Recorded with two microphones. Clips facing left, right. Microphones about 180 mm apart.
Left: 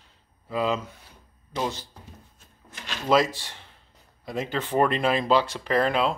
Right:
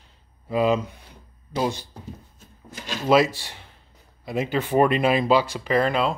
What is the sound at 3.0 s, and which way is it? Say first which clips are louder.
Speech: right 3 dB; 10° right (ahead or behind).